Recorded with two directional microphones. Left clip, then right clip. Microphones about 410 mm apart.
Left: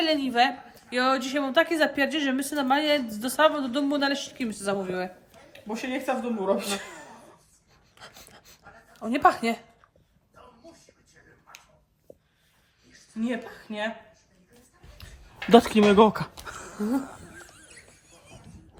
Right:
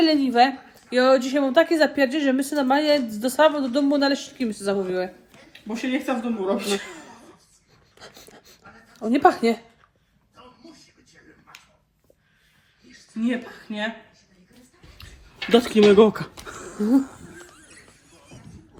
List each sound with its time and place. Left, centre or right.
0.0 s a woman's voice: centre
5.6 s speech: left
7.9 s a sound: centre
9.0 s a woman's voice: centre
13.1 s speech: left
14.9 s speech: left
17.5 s squeal: centre